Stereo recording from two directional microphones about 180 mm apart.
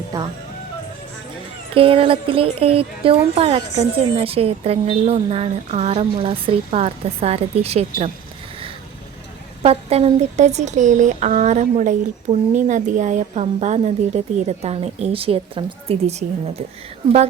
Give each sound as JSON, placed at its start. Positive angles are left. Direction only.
{"t": 0.1, "sound": "speech", "side_deg": -20}
{"t": 1.7, "sound": "speech", "side_deg": -30}
{"t": 9.6, "sound": "speech", "side_deg": -35}